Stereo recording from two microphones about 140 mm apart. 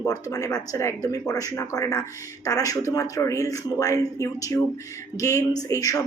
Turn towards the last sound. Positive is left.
turn(degrees=25)  # may be behind; listen again after turning